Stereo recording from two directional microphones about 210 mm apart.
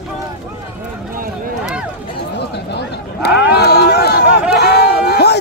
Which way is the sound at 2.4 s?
55° left (ahead or behind).